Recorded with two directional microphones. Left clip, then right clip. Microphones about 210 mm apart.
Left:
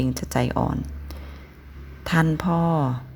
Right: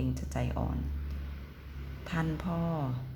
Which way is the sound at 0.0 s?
40° left (ahead or behind).